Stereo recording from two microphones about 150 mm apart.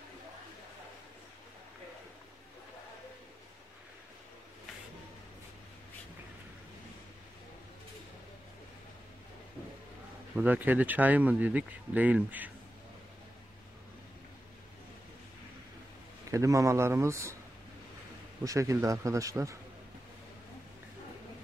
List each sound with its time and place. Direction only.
10.3 s speech: 10° right (ahead or behind)
16.3 s a man's voice: 20° right (ahead or behind)
18.4 s a man's voice: 20° right (ahead or behind)